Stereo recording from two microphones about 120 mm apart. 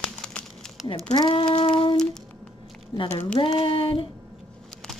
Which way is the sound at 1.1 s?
40° left (ahead or behind).